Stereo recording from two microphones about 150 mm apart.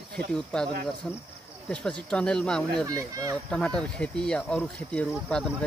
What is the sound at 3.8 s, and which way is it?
Speech, 5° left (ahead or behind).